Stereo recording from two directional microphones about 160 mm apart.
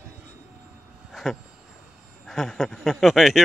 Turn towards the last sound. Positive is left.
turn(degrees=0)  # may be behind; listen again after turning